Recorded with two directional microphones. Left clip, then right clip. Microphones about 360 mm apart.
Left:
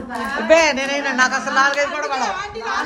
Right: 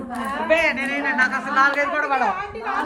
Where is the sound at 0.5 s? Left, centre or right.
Centre.